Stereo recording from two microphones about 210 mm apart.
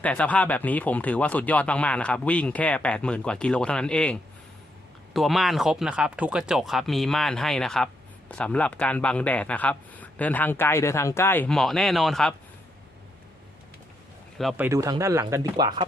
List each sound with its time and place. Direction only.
0.0 s speech: 5° left (ahead or behind)
14.5 s speech: 10° right (ahead or behind)